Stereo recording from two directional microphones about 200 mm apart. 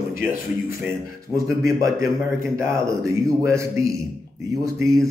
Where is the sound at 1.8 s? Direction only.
15° right (ahead or behind).